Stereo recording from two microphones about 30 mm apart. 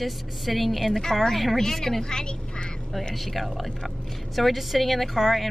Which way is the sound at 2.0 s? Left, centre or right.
Left.